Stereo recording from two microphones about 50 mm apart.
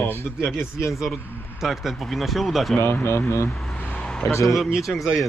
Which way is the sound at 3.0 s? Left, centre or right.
Left.